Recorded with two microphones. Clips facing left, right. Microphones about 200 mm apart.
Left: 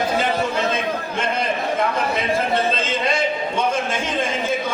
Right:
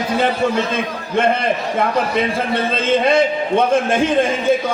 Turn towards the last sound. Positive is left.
turn(degrees=-55)  # may be behind; listen again after turning